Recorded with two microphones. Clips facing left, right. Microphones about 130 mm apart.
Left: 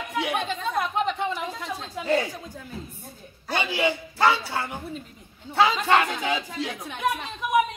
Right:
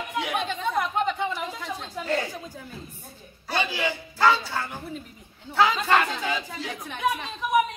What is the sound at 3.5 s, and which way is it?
Speech, 20° left (ahead or behind).